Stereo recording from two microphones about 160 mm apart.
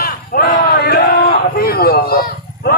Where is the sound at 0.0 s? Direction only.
65° left (ahead or behind).